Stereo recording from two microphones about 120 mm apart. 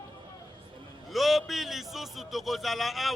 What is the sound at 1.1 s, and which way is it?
A man's voice, centre (ahead or behind).